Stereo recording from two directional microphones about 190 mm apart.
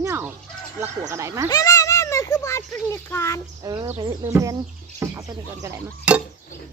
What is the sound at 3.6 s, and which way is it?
Speech, 20° right (ahead or behind).